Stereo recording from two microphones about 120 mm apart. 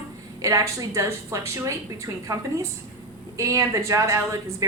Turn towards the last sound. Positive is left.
turn(degrees=-25)  # may be behind; listen again after turning